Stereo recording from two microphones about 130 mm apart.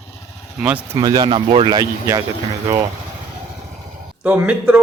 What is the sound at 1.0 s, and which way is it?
Speech, 30° right (ahead or behind).